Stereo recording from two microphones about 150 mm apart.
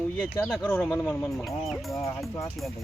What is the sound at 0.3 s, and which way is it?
Speech, 15° left (ahead or behind).